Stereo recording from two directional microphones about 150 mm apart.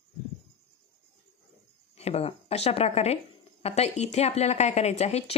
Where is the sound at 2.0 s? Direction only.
45° left (ahead or behind).